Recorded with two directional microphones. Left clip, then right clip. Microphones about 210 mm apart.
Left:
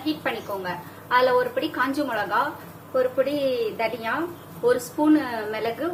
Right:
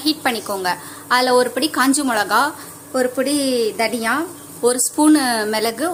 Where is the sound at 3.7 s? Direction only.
60° right (ahead or behind).